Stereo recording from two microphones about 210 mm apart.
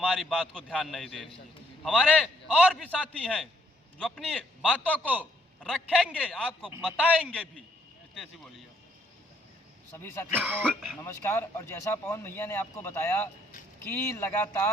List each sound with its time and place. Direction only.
0.0 s a man's voice: 5° left (ahead or behind)
9.9 s speech: 10° left (ahead or behind)
10.3 s a man's voice: 10° right (ahead or behind)
11.0 s speech: 10° left (ahead or behind)